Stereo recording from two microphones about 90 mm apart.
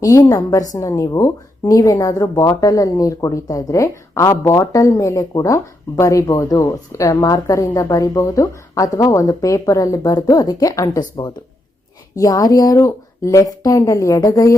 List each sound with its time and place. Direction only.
0.0 s a woman's voice: 45° left (ahead or behind)